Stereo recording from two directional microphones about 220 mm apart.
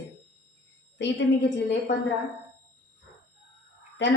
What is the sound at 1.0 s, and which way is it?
Speech, 55° left (ahead or behind).